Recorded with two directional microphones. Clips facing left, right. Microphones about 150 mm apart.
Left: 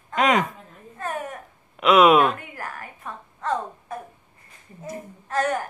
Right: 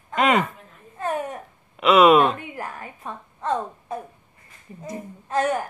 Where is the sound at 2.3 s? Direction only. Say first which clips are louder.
Right 2 dB; 20° right (ahead or behind).